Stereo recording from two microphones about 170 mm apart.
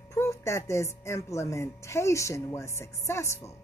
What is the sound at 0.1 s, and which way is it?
Speech, 15° left (ahead or behind).